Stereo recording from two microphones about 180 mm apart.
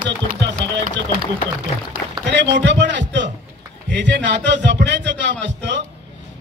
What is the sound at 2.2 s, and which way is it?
Speech, 75° right (ahead or behind).